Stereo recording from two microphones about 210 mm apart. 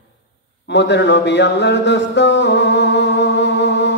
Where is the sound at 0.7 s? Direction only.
55° left (ahead or behind).